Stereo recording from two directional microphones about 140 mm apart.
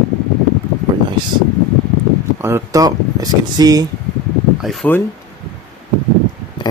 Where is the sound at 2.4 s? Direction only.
20° right (ahead or behind).